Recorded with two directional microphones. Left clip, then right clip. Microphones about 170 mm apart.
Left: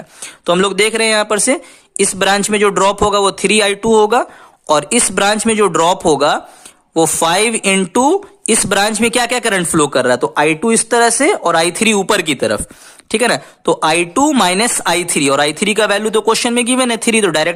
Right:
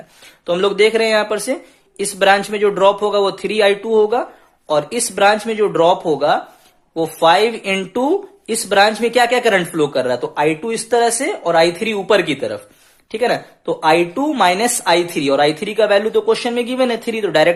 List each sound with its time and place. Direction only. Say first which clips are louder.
0.4 s speech: left 1 dB; 45° left (ahead or behind)